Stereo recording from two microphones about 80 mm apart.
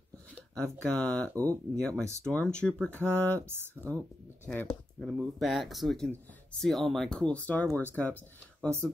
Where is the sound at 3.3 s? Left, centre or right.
Right.